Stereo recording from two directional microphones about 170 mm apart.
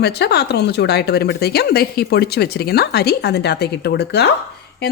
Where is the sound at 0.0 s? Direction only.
75° left (ahead or behind).